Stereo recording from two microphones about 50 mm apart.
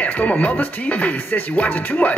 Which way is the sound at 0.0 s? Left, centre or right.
Left.